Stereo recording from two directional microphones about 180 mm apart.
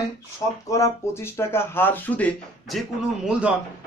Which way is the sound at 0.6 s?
15° left (ahead or behind).